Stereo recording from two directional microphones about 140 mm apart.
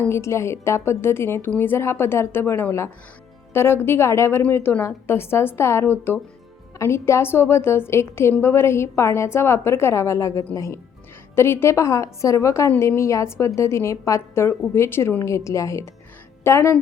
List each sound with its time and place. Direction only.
0.1 s a woman's voice: 20° left (ahead or behind)